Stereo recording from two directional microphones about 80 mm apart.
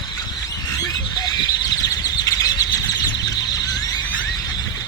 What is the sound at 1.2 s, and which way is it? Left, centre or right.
Bird, left.